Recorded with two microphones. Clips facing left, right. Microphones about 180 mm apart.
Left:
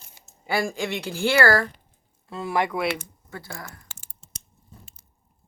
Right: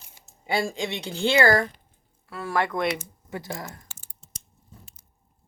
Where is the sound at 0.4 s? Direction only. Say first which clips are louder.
Left 1 dB; 25° right (ahead or behind).